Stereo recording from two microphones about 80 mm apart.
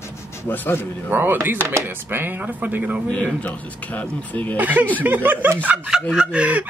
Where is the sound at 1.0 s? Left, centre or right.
Right.